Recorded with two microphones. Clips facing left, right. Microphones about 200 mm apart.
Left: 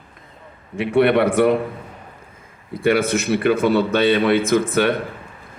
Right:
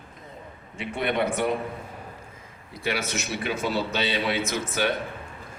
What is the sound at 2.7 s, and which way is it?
A man's voice, 55° left (ahead or behind).